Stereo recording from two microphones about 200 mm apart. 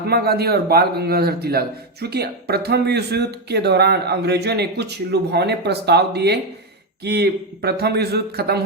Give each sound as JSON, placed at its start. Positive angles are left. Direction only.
{"t": 0.1, "sound": "speech", "side_deg": -50}